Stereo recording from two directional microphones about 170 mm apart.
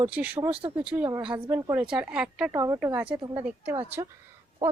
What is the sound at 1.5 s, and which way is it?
Speech, 15° right (ahead or behind).